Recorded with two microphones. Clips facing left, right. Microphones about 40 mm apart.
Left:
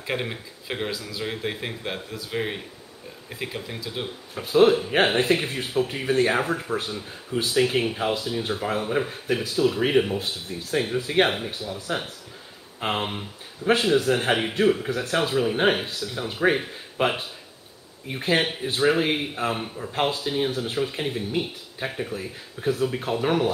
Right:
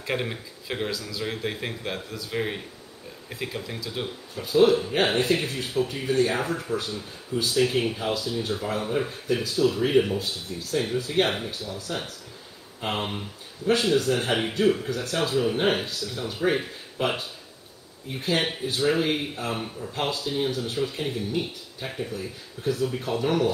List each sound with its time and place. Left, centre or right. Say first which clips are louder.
0.0 s speech: even; centre
4.4 s speech: left 2 dB; left